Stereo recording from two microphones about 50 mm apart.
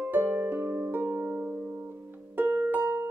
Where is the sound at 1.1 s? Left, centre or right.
Right.